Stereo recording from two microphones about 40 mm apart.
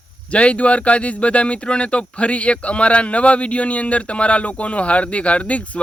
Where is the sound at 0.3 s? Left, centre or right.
Left.